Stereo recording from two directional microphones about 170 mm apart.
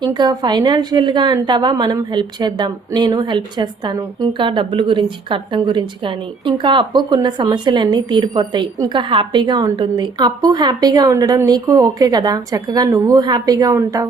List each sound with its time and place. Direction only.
0.0 s a woman's voice: 25° right (ahead or behind)